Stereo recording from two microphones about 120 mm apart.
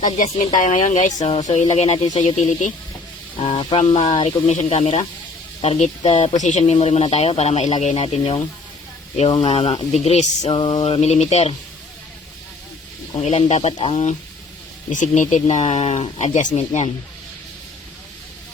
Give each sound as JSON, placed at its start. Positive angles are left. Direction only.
{"t": 0.0, "sound": "speech", "side_deg": 90}
{"t": 2.0, "sound": "speech", "side_deg": 40}
{"t": 2.3, "sound": "speech", "side_deg": 85}
{"t": 3.4, "sound": "speech", "side_deg": 50}
{"t": 6.3, "sound": "speech", "side_deg": 80}
{"t": 9.4, "sound": "speech", "side_deg": 60}
{"t": 10.5, "sound": "speech", "side_deg": 45}
{"t": 13.1, "sound": "speech", "side_deg": 70}
{"t": 14.9, "sound": "speech", "side_deg": 90}